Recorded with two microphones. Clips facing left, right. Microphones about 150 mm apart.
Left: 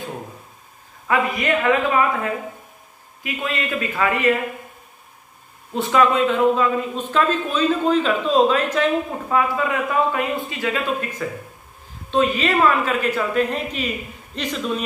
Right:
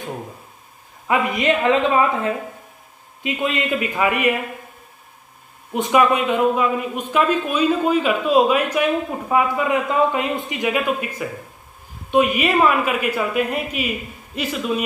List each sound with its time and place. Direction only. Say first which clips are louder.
1.0 s a woman's voice: right 2 dB; 20° right (ahead or behind)
3.2 s speech: right 4 dB; 20° right (ahead or behind)
5.7 s speech: right 1 dB; 15° right (ahead or behind)